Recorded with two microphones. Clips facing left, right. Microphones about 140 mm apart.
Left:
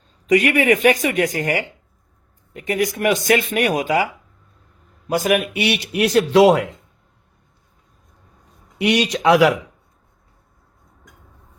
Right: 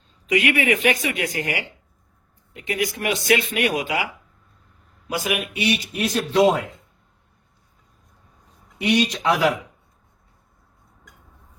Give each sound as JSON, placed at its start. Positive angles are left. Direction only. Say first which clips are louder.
{"t": 0.3, "sound": "speech", "louder": "left 5 dB", "side_deg": 45}
{"t": 5.0, "sound": "speech", "louder": "left 7 dB", "side_deg": 45}
{"t": 5.6, "sound": "a man's voice", "louder": "left 4 dB", "side_deg": 70}
{"t": 8.8, "sound": "a man's voice", "louder": "left 3 dB", "side_deg": 85}